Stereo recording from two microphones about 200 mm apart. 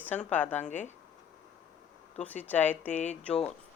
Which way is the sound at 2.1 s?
10° left (ahead or behind).